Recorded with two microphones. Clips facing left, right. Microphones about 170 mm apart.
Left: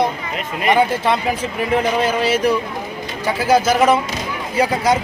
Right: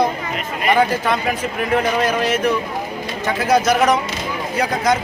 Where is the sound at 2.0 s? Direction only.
30° left (ahead or behind).